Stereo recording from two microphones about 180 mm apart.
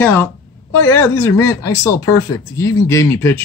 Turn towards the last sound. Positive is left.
turn(degrees=15)  # may be behind; listen again after turning